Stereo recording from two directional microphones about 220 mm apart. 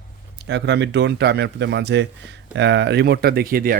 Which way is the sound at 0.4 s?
55° right (ahead or behind).